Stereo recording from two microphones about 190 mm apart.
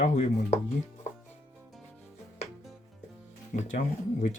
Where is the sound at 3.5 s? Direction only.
40° left (ahead or behind).